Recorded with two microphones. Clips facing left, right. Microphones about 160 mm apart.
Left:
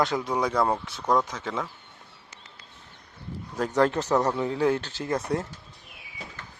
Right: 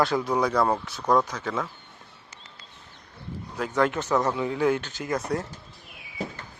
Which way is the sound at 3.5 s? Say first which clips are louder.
Left 2 dB; 40° left (ahead or behind).